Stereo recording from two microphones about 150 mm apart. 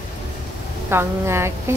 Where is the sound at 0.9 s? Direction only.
15° right (ahead or behind).